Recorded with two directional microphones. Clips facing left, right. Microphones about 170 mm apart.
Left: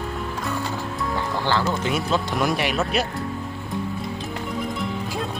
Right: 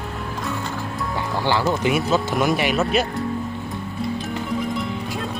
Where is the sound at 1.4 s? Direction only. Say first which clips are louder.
Right 4 dB; 15° right (ahead or behind).